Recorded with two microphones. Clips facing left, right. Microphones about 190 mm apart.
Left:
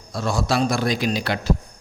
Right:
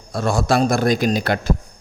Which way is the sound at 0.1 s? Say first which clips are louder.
Right 4 dB; 55° right (ahead or behind).